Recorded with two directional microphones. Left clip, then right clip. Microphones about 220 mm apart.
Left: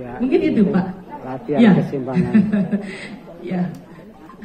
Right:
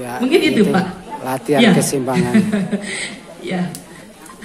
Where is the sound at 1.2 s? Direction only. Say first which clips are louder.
Right 6 dB; 25° right (ahead or behind).